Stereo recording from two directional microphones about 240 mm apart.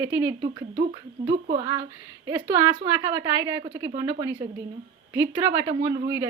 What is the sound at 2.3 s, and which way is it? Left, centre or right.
A woman's voice, centre.